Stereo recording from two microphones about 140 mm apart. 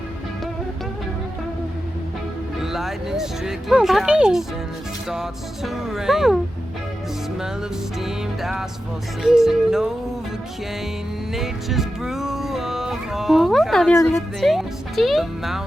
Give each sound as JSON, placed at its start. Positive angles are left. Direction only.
{"t": 2.6, "sound": "speech", "side_deg": 0}
{"t": 7.9, "sound": "speech", "side_deg": 0}
{"t": 11.3, "sound": "music", "side_deg": 0}
{"t": 13.9, "sound": "a woman's voice", "side_deg": 20}
{"t": 14.4, "sound": "speech", "side_deg": 0}